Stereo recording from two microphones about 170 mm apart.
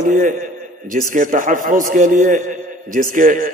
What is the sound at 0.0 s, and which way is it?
A man's voice, 50° right (ahead or behind).